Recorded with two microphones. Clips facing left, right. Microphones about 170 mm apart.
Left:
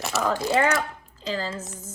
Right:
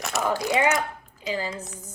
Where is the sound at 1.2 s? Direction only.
15° right (ahead or behind).